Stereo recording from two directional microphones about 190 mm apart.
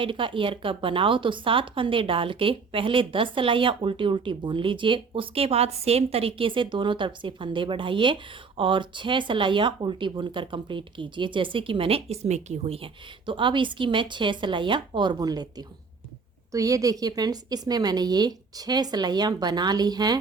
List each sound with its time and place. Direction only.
0.0 s speech: 25° right (ahead or behind)